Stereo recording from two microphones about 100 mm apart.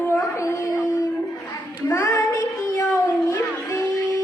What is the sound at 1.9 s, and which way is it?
Child singing, 35° left (ahead or behind).